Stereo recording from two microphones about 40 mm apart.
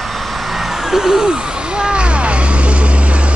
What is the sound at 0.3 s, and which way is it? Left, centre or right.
Vehicle, centre.